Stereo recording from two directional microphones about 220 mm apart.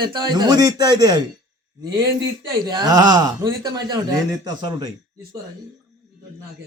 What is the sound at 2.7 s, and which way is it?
Speech, 20° right (ahead or behind).